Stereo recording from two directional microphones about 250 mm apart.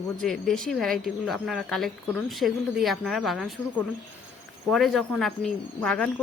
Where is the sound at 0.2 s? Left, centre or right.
Centre.